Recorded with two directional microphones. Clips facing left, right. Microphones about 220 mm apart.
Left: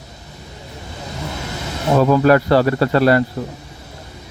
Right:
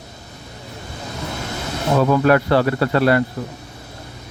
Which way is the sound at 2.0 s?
35° left (ahead or behind).